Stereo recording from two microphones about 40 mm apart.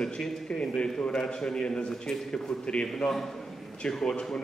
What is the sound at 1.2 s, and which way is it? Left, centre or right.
Speech, centre.